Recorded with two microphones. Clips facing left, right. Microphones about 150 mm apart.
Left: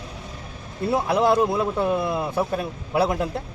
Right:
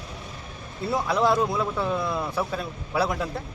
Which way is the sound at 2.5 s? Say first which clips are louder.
Left 4 dB; 55° left (ahead or behind).